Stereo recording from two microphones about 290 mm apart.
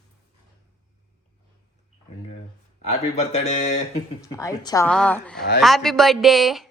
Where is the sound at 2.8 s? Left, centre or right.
Left.